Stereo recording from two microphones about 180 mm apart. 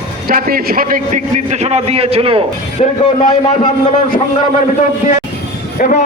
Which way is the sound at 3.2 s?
40° left (ahead or behind).